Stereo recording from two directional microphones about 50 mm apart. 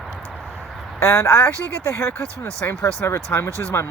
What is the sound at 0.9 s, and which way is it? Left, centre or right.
Speech, left.